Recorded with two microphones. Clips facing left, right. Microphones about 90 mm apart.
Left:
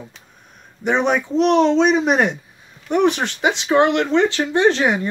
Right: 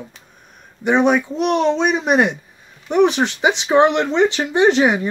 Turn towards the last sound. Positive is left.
turn(degrees=-15)  # may be behind; listen again after turning